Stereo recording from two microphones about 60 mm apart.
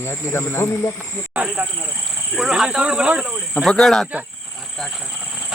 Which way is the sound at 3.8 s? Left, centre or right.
Centre.